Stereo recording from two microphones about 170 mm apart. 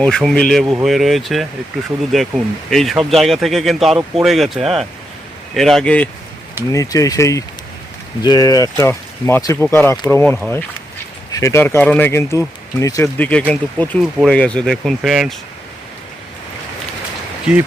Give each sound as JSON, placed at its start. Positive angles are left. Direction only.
{"t": 0.0, "sound": "speech", "side_deg": 5}
{"t": 0.6, "sound": "speech", "side_deg": -20}
{"t": 0.9, "sound": "speech", "side_deg": 0}
{"t": 6.7, "sound": "speech", "side_deg": 20}
{"t": 11.3, "sound": "speech", "side_deg": 20}